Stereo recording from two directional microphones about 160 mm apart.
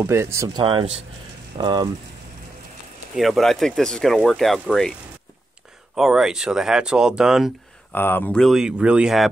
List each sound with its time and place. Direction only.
0.0 s speech: 15° right (ahead or behind)
3.2 s speech: centre (ahead or behind)
5.9 s speech: centre (ahead or behind)
7.9 s speech: 10° left (ahead or behind)